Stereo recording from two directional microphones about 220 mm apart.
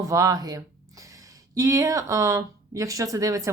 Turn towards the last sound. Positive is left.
turn(degrees=-15)  # may be behind; listen again after turning